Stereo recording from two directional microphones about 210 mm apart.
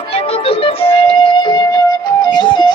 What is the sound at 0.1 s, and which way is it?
Music, 30° left (ahead or behind).